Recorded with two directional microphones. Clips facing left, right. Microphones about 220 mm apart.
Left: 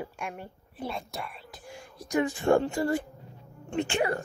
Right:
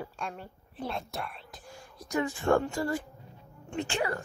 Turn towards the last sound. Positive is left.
turn(degrees=20)  # may be behind; listen again after turning